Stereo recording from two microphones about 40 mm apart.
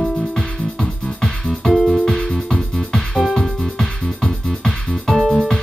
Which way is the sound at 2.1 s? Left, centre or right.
Centre.